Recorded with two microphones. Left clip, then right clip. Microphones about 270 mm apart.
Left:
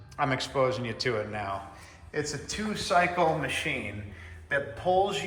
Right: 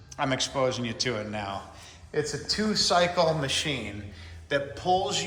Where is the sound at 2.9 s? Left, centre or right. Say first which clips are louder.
Even; centre.